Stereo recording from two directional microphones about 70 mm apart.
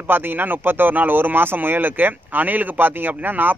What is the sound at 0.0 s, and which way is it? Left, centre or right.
Speech, right.